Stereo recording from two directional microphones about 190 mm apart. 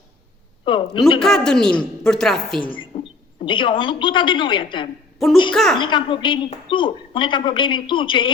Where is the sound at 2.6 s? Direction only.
25° left (ahead or behind).